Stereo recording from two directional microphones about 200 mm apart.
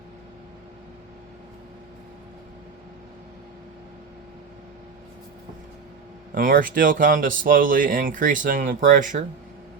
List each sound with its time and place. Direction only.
6.3 s speech: 45° right (ahead or behind)